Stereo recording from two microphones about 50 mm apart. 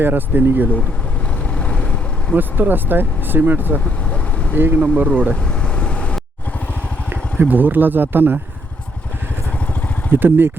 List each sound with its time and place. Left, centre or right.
0.0 s speech: right
2.3 s speech: right
4.8 s speech: right
5.3 s vehicle: left
7.3 s speech: right
10.1 s speech: right